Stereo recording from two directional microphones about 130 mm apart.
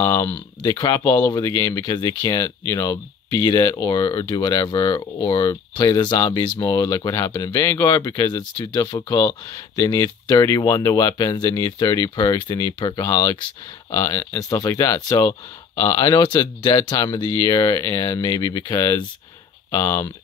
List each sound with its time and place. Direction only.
0.0 s speech: 25° left (ahead or behind)